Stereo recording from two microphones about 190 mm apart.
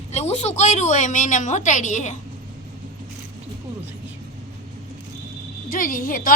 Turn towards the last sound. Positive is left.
turn(degrees=45)  # may be behind; listen again after turning